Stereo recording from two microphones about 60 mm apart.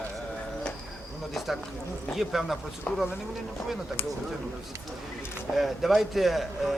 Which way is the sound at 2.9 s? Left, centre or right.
Centre.